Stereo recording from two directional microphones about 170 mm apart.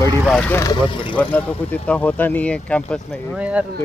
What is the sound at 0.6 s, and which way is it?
Speech, 30° left (ahead or behind).